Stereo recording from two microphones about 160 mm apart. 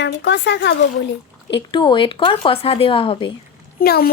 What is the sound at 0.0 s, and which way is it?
Speech, 90° left.